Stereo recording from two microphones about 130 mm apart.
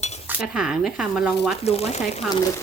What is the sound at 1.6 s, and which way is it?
Speech, 55° left (ahead or behind).